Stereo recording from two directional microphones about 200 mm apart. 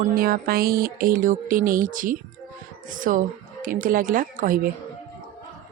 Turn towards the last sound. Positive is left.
turn(degrees=-45)  # may be behind; listen again after turning